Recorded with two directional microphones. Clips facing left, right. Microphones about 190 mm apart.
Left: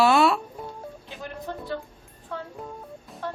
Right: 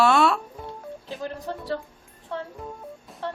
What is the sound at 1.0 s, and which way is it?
Speech, 35° right (ahead or behind).